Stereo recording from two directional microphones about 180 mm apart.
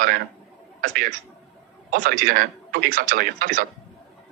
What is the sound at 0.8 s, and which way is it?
Speech, 50° right (ahead or behind).